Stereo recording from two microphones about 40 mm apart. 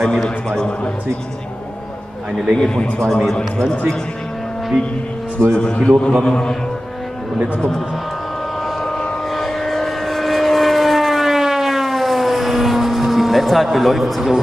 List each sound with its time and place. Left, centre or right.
0.0 s a man's voice: centre
2.6 s a man's voice: centre
5.5 s a man's voice: centre
9.4 s vehicle: centre